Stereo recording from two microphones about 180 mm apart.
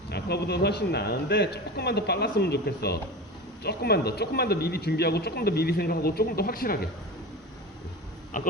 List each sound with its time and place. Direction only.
0.1 s speech: 65° left (ahead or behind)
8.3 s speech: 50° left (ahead or behind)